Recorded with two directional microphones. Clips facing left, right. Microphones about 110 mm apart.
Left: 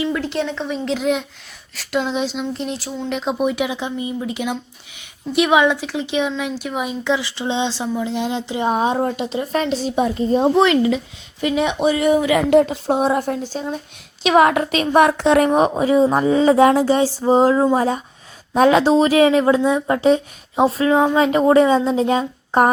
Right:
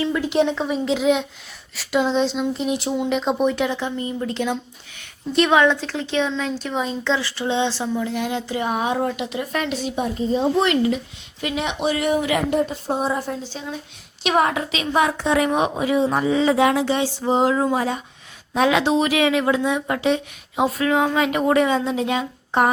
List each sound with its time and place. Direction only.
0.1 s speech: 10° right (ahead or behind)
2.7 s speech: 15° right (ahead or behind)
3.1 s a woman's voice: centre (ahead or behind); by 9.9 s 30° left (ahead or behind)
9.9 s a woman's voice: 85° left
10.3 s a woman's voice: 55° left (ahead or behind)
12.5 s a woman's voice: 90° left; by 13.7 s 45° left (ahead or behind)
14.3 s a woman's voice: 70° left (ahead or behind)
14.7 s a woman's voice: 55° left (ahead or behind)
15.4 s speech: 35° left (ahead or behind)